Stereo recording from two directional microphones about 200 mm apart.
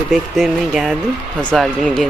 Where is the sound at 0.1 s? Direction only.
Centre (ahead or behind).